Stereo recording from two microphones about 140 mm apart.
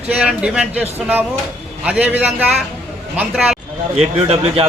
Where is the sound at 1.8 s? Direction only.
10° right (ahead or behind).